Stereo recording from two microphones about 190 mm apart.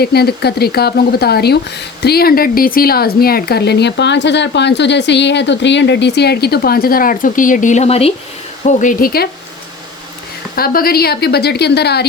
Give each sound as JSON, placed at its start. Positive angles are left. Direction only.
{"t": 0.0, "sound": "speech", "side_deg": 55}
{"t": 8.6, "sound": "speech", "side_deg": 45}
{"t": 10.5, "sound": "speech", "side_deg": 50}